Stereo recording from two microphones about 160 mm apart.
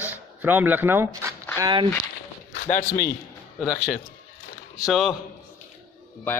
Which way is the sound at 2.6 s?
60° left (ahead or behind).